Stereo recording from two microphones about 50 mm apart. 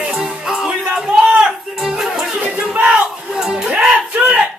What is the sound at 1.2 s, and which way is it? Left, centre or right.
Music, centre.